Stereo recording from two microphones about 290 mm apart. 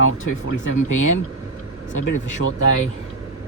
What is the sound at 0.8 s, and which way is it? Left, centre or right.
Speech, left.